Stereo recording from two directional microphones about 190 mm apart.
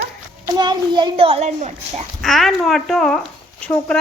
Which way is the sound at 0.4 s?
20° right (ahead or behind).